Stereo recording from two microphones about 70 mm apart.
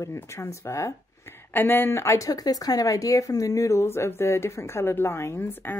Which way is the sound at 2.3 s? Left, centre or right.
Left.